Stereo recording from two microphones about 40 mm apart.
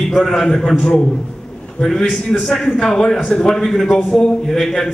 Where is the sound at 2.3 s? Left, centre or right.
Centre.